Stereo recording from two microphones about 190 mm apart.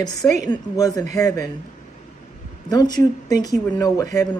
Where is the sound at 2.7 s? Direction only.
20° left (ahead or behind).